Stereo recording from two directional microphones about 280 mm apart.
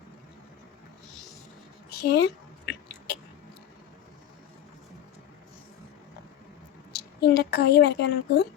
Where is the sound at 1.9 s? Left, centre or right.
Left.